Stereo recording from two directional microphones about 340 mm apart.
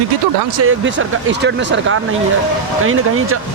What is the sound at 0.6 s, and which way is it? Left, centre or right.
Speech, right.